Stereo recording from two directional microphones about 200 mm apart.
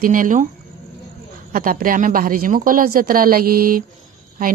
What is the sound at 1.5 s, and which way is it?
Speech, 45° right (ahead or behind).